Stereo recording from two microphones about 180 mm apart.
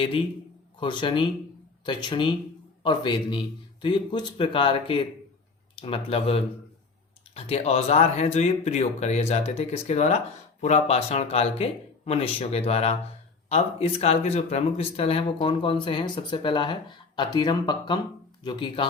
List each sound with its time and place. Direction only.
0.8 s a man's voice: 30° left (ahead or behind)